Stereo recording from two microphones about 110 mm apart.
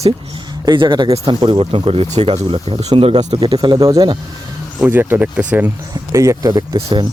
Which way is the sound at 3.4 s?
40° right (ahead or behind).